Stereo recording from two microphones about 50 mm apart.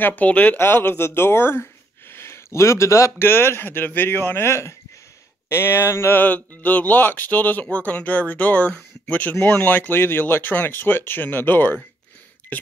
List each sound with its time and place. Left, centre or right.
0.0 s speech: left
0.3 s speech: left
0.6 s speech: left
3.2 s speech: left
4.5 s speech: left
5.5 s speech: left
6.1 s speech: left